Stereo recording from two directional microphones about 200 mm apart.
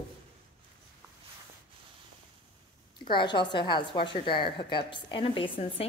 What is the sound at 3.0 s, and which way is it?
A woman's voice, 25° left (ahead or behind).